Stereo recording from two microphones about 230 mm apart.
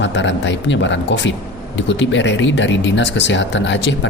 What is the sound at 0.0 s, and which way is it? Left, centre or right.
Speech, left.